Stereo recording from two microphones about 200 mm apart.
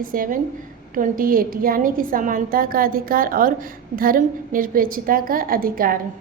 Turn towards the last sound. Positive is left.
turn(degrees=-45)  # may be behind; listen again after turning